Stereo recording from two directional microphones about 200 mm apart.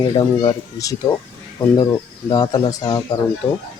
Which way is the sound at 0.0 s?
20° left (ahead or behind).